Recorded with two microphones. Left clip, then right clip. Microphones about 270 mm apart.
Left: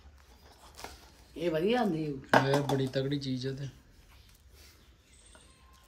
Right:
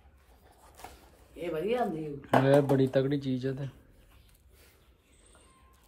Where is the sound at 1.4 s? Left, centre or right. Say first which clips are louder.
Left 2 dB; centre.